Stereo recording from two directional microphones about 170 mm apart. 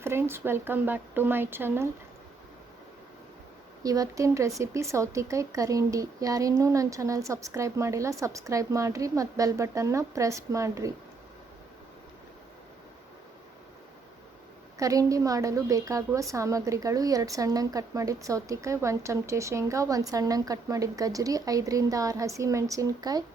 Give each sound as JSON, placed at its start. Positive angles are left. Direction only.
{"t": 0.0, "sound": "speech", "side_deg": -15}
{"t": 3.8, "sound": "a woman's voice", "side_deg": -20}
{"t": 14.8, "sound": "a woman's voice", "side_deg": -20}